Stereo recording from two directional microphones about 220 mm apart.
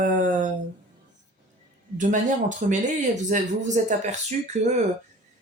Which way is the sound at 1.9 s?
35° right (ahead or behind).